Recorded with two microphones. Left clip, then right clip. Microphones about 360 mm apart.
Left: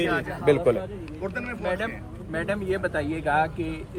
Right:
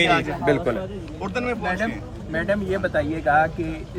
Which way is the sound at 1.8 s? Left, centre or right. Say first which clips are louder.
Right 4 dB; centre.